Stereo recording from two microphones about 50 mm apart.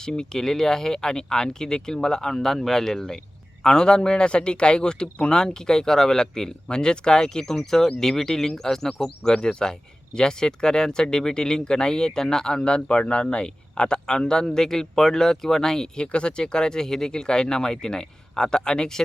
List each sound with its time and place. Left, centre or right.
0.0 s speech: centre
9.0 s speech: centre